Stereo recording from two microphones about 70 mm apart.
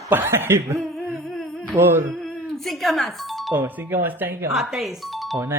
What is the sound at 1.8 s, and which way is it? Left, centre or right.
Speech, right.